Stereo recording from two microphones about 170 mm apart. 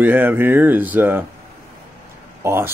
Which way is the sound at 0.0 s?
10° right (ahead or behind).